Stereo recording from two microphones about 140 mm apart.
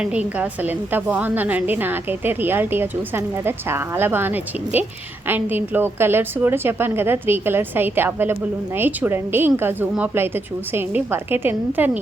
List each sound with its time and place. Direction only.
0.0 s a woman's voice: 10° right (ahead or behind)